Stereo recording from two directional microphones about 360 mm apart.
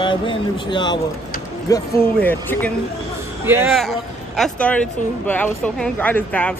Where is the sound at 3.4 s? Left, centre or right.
Centre.